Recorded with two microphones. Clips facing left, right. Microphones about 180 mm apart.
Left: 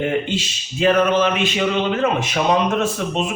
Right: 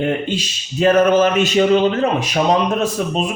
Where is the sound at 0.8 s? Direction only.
45° right (ahead or behind).